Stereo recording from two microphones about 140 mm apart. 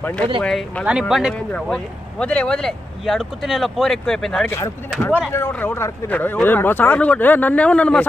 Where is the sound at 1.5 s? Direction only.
10° left (ahead or behind).